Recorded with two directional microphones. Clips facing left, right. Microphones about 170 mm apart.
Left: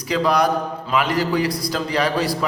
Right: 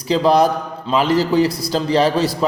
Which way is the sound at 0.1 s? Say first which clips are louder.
Right 4 dB; 30° right (ahead or behind).